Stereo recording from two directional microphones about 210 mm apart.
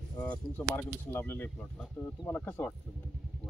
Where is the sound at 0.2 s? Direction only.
10° left (ahead or behind).